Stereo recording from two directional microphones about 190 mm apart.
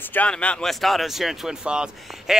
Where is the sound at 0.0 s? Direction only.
10° left (ahead or behind).